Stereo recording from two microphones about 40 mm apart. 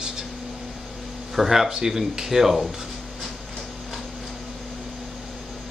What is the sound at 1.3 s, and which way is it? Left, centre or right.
Speech, centre.